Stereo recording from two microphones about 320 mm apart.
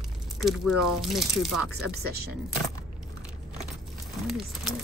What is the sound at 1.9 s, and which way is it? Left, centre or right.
Speech, right.